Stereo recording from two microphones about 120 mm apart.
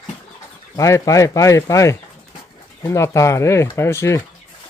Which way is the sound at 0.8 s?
25° left (ahead or behind).